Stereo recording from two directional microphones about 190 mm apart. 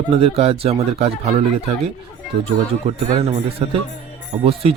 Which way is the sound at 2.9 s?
35° right (ahead or behind).